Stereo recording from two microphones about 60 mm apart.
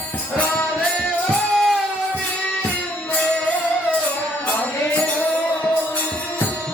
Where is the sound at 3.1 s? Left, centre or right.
Left.